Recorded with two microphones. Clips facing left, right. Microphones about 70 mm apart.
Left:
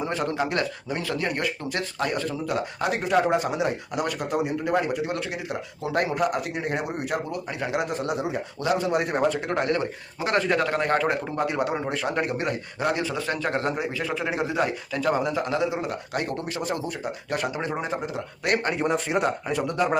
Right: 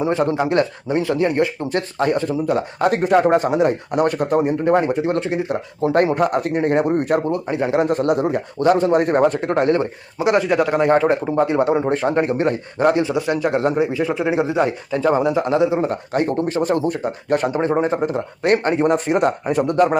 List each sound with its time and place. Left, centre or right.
0.0 s speech: right
2.8 s speech: right
7.5 s speech: right
7.9 s speech: right
9.6 s speech: right
10.2 s speech: centre
11.3 s speech: right
13.0 s speech: right
18.9 s speech: right